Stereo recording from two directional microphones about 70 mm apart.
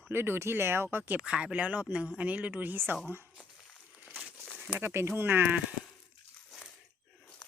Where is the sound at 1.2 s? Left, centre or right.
Centre; by 2.9 s right.